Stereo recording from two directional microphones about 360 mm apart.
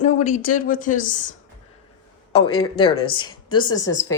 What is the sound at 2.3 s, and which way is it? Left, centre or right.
Speech, centre.